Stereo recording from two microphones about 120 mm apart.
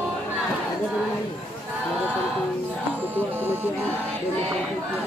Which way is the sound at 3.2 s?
15° right (ahead or behind).